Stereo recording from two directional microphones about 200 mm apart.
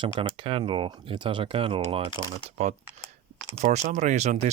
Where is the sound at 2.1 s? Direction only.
20° left (ahead or behind).